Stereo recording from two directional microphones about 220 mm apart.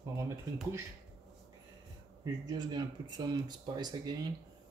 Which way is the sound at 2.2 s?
20° right (ahead or behind).